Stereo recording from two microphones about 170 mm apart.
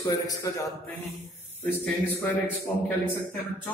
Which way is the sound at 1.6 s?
10° left (ahead or behind).